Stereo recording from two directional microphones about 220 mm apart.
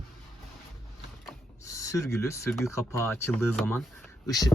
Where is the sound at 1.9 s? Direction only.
15° left (ahead or behind).